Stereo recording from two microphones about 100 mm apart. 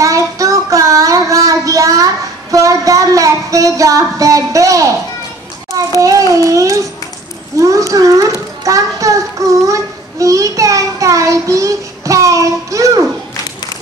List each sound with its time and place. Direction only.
0.0 s child singing: 35° right (ahead or behind)
2.5 s a woman's voice: 35° right (ahead or behind)
5.9 s a child's voice: 35° right (ahead or behind)
9.7 s a sound: 35° right (ahead or behind)